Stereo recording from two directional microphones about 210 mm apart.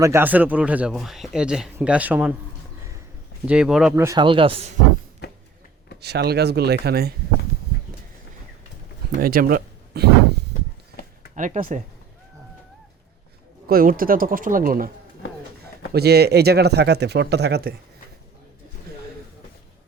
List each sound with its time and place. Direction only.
0.0 s speech: 10° right (ahead or behind)
3.4 s speech: 5° right (ahead or behind)
3.9 s speech: 15° right (ahead or behind)
5.2 s a sound: 50° left (ahead or behind)
6.0 s speech: 50° right (ahead or behind)
9.2 s speech: 45° right (ahead or behind)
11.3 s speech: 35° right (ahead or behind)
13.7 s speech: 45° right (ahead or behind)
15.9 s speech: 50° right (ahead or behind)